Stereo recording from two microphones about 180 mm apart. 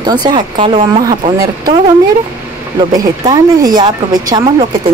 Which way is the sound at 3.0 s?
20° right (ahead or behind).